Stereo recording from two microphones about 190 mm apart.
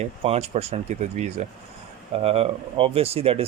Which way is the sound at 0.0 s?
35° right (ahead or behind).